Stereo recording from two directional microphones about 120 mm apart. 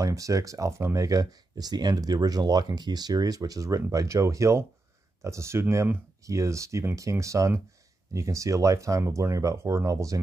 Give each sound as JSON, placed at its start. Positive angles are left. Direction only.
{"t": 0.0, "sound": "speech", "side_deg": -30}